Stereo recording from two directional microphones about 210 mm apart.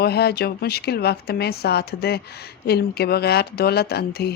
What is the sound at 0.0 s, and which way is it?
Speech, 50° left (ahead or behind).